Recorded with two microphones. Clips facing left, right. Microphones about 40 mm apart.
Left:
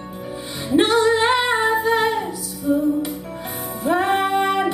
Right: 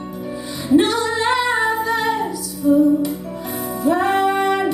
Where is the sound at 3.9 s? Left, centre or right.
Left.